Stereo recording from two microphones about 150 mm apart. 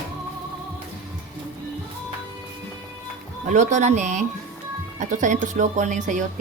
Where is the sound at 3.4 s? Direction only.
55° right (ahead or behind).